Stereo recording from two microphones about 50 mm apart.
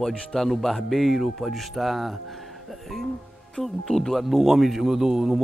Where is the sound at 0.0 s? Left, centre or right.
Centre.